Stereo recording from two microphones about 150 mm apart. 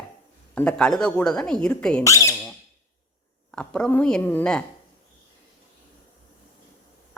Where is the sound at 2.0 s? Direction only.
20° left (ahead or behind).